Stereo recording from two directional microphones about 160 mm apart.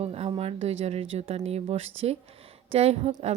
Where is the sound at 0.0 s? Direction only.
40° right (ahead or behind).